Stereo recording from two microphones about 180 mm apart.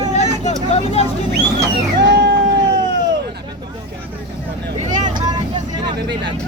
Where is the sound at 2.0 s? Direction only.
70° right (ahead or behind).